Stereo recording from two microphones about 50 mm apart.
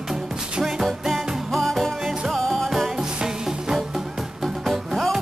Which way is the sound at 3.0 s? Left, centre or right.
Centre.